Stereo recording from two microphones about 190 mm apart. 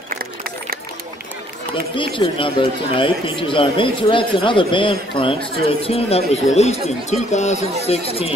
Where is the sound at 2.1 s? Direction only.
25° left (ahead or behind).